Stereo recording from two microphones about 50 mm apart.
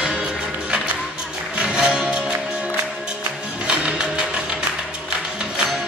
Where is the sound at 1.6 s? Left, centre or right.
Right.